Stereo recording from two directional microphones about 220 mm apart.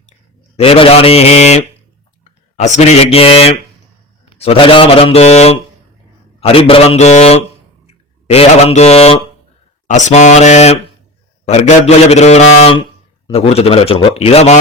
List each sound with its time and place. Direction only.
0.5 s a man's voice: 25° left (ahead or behind)